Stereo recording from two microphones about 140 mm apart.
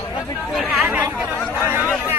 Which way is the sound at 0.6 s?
10° right (ahead or behind).